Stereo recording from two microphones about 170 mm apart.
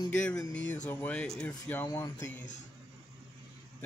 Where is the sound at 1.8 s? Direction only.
20° left (ahead or behind).